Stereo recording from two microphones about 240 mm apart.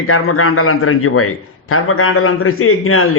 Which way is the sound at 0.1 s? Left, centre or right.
Left.